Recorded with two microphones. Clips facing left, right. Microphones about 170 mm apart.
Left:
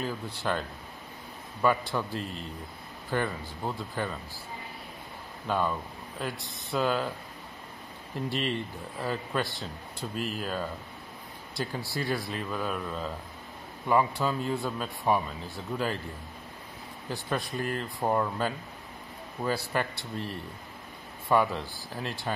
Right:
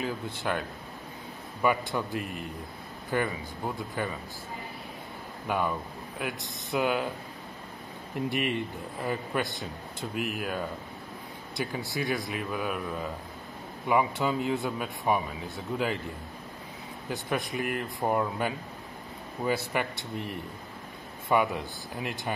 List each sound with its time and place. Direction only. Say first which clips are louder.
0.0 s a man's voice: right 1 dB; 15° right (ahead or behind)
1.6 s speech: even; 15° right (ahead or behind)
5.5 s speech: even; 15° right (ahead or behind)
8.3 s speech: right 1 dB; 15° right (ahead or behind)
10.1 s speech: right 1 dB; 65° right (ahead or behind)
10.4 s speech: right 1 dB; 15° right (ahead or behind)
13.8 s speech: even; 15° right (ahead or behind)
17.1 s speech: right 1 dB; 20° right (ahead or behind)